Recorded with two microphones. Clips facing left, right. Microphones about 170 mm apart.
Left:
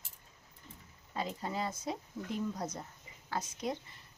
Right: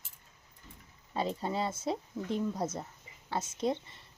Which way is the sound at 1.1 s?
30° right (ahead or behind).